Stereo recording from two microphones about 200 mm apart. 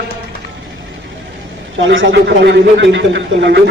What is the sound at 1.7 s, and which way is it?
A man's voice, 70° right (ahead or behind).